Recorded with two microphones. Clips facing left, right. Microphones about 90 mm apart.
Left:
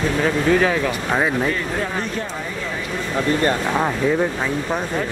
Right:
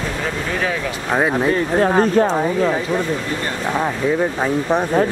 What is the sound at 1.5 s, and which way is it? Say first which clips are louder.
Speech: right 7 dB; 45° right (ahead or behind).